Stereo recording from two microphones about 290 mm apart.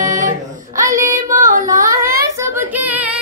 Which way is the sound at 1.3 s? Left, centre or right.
Right.